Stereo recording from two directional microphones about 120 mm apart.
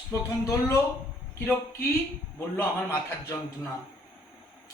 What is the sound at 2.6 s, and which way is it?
Speech, 20° left (ahead or behind).